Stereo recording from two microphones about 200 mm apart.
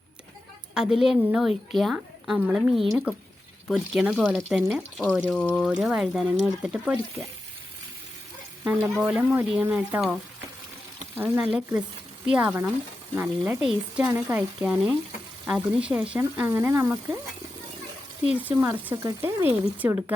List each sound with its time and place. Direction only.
0.7 s a woman's voice: 5° right (ahead or behind)
8.6 s speech: 5° right (ahead or behind)
11.2 s a woman's voice: 10° right (ahead or behind)
18.3 s speech: 10° right (ahead or behind)